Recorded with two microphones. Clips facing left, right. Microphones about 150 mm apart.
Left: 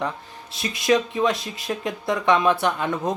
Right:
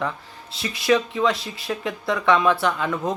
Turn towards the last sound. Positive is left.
turn(degrees=20)  # may be behind; listen again after turning